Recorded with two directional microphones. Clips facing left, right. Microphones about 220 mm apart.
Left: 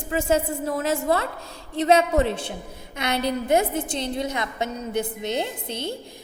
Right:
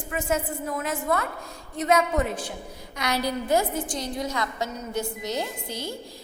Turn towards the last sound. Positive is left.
turn(degrees=25)  # may be behind; listen again after turning